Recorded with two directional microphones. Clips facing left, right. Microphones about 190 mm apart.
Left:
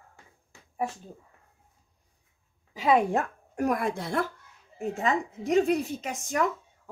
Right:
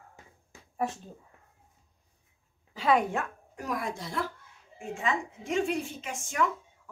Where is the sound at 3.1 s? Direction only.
45° left (ahead or behind).